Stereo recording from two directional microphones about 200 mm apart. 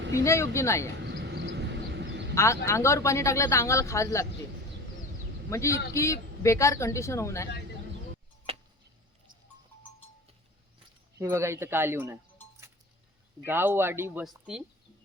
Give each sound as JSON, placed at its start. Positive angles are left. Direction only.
{"t": 0.1, "sound": "speech", "side_deg": 15}
{"t": 1.0, "sound": "quack", "side_deg": -60}
{"t": 2.3, "sound": "speech", "side_deg": 15}
{"t": 5.5, "sound": "speech", "side_deg": 15}
{"t": 11.2, "sound": "speech", "side_deg": -15}